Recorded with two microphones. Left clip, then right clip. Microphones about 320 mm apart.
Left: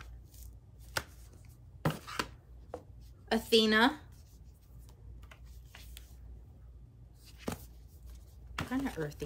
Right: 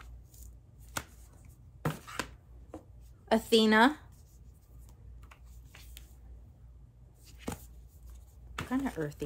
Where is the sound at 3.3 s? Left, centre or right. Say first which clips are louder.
Right 2 dB; centre.